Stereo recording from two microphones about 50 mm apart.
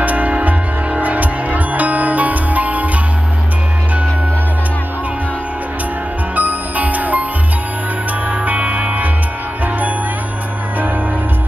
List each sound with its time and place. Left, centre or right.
0.0 s music: right
6.3 s music: right
8.3 s music: right